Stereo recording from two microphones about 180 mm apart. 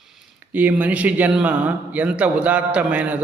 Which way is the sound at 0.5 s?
10° right (ahead or behind).